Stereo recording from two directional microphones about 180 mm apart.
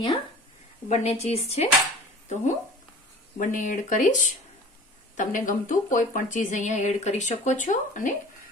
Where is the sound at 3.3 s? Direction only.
45° left (ahead or behind).